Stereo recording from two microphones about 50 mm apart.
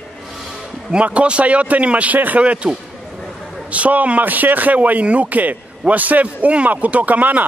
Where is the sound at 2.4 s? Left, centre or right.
Right.